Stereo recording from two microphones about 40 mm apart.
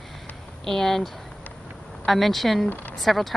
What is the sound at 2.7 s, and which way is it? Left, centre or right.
Speech, left.